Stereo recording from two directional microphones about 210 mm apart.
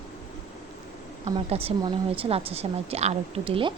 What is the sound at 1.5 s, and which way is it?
A woman's voice, 25° right (ahead or behind).